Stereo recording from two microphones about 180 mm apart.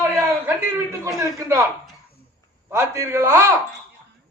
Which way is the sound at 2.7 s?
15° right (ahead or behind).